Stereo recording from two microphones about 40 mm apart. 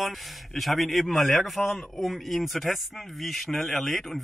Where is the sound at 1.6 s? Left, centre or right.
Left.